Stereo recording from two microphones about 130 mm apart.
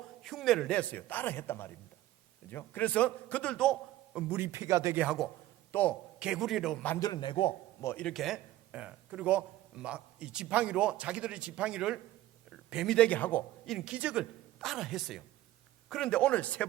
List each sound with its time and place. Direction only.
0.2 s a man's voice: centre (ahead or behind)
4.3 s speech: 15° right (ahead or behind)
4.9 s a woman's voice: 5° right (ahead or behind)
5.7 s a man's voice: 15° left (ahead or behind)
6.1 s a woman's voice: 5° right (ahead or behind)
7.0 s a man's voice: 35° left (ahead or behind)
7.8 s speech: 20° left (ahead or behind)
8.0 s a man's voice: centre (ahead or behind)
13.7 s a woman's voice: 5° right (ahead or behind)